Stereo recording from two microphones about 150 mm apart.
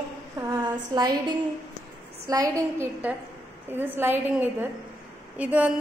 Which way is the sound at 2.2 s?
20° right (ahead or behind).